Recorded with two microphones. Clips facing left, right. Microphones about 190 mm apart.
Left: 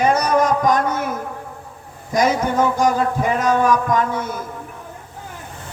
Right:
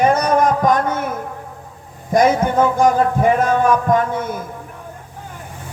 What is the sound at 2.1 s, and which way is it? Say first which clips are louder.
Speech: right 3 dB; 55° right (ahead or behind).